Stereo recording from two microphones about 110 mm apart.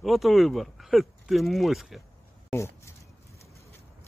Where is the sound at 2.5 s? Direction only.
25° left (ahead or behind).